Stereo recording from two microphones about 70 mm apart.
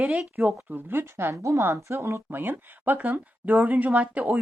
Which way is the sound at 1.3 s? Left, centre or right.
Right.